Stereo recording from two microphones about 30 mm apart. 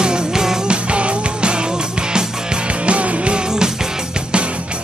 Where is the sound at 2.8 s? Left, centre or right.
Right.